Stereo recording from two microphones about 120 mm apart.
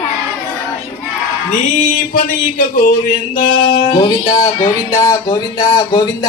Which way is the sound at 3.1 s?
50° left (ahead or behind).